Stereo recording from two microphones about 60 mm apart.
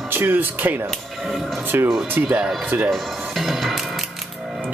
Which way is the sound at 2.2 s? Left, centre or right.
Centre.